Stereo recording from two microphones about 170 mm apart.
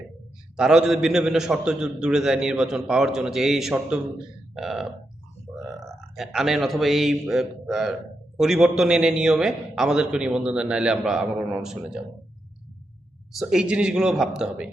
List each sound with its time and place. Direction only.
0.5 s a man's voice: 5° right (ahead or behind)
6.1 s a man's voice: centre (ahead or behind)
13.4 s a man's voice: 5° right (ahead or behind)